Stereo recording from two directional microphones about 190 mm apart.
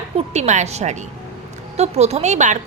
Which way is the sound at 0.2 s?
35° right (ahead or behind).